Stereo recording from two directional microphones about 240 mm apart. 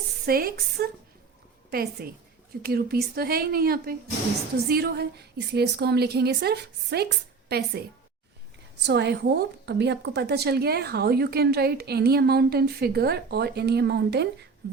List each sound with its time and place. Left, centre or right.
0.3 s a woman's voice: right